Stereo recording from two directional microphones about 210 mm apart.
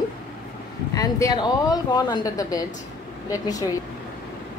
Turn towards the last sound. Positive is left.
turn(degrees=15)  # may be behind; listen again after turning